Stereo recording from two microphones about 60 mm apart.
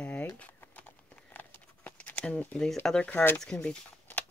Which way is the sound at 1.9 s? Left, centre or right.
Left.